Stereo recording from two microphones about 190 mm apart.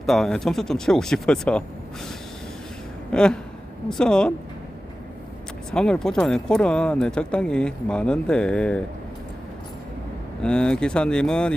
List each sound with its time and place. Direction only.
0.0 s speech: centre (ahead or behind)
3.1 s speech: 5° left (ahead or behind)
5.7 s speech: 5° left (ahead or behind)
10.4 s speech: 5° left (ahead or behind)